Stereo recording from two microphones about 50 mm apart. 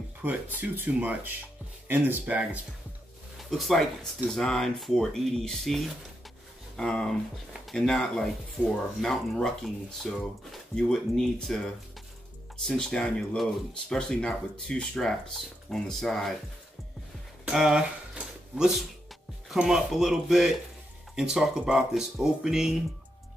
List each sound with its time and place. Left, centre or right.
0.2 s speech: right
3.3 s speech: centre
6.8 s speech: centre
10.8 s speech: centre
17.5 s speech: centre
18.2 s a sound: centre
19.6 s speech: centre